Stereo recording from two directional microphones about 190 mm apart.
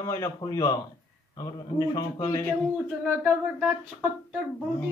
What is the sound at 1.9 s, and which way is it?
Speech, 20° left (ahead or behind).